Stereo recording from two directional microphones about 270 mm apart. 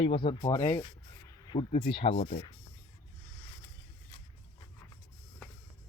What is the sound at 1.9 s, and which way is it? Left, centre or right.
Speech, left.